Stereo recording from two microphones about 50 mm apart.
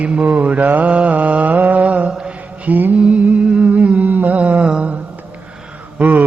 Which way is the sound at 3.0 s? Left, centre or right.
Right.